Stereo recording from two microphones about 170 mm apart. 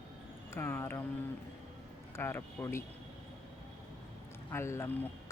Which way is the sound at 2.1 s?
15° left (ahead or behind).